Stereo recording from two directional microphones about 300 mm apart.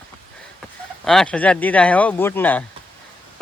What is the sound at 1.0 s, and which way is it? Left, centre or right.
Speech, centre.